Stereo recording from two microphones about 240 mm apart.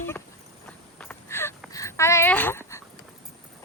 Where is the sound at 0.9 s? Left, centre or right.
Centre.